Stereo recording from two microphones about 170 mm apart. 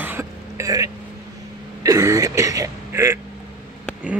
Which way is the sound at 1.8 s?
20° right (ahead or behind).